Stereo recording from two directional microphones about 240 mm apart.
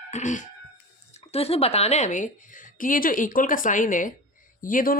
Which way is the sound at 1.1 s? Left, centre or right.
Left.